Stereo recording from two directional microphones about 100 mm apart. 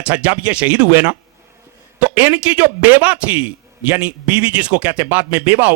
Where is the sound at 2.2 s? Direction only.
15° right (ahead or behind).